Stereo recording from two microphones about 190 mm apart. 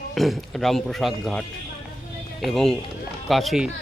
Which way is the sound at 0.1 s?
Centre (ahead or behind).